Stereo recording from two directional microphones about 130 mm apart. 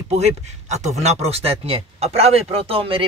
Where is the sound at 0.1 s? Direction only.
60° right (ahead or behind).